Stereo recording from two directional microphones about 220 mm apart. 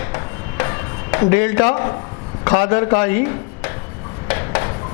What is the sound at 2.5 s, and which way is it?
Speech, 20° left (ahead or behind).